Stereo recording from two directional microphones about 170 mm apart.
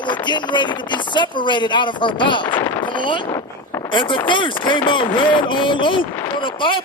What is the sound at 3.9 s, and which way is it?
Speech, 30° left (ahead or behind).